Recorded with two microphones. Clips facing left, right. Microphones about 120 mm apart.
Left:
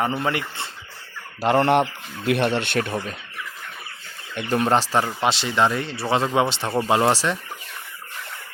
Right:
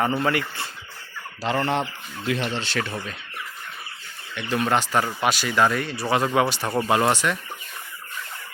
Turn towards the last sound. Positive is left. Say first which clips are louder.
# left 1 dB
turn(degrees=30)  # may be behind; listen again after turning